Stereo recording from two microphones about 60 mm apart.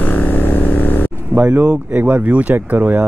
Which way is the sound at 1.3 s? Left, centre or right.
Right.